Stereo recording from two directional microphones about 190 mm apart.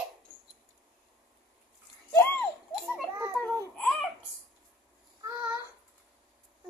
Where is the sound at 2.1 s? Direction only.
10° left (ahead or behind).